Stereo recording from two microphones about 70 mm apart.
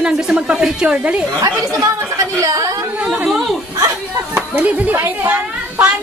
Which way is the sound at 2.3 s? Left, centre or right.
Right.